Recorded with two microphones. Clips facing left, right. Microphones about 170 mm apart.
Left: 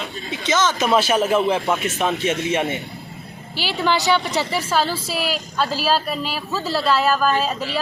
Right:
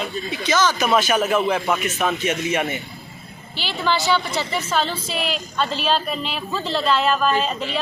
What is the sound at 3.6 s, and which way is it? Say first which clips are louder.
A woman's voice: left 2 dB; 10° left (ahead or behind).